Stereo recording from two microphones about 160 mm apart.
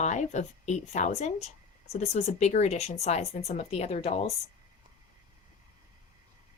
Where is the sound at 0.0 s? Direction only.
45° left (ahead or behind).